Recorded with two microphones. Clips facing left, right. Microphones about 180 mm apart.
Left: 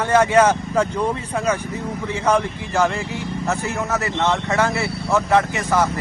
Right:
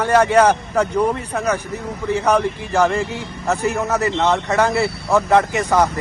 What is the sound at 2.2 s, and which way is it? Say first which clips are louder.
Speech: even; 15° right (ahead or behind).